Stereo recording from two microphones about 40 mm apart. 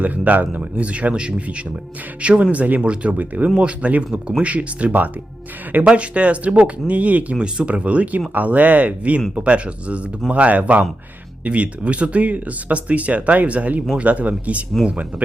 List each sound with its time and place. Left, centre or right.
0.0 s speech: right
7.3 s speech: right